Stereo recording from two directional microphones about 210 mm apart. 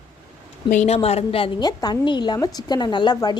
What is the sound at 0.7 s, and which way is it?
A woman's voice, 30° left (ahead or behind).